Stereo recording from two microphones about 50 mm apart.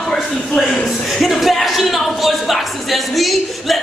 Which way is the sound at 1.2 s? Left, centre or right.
Centre.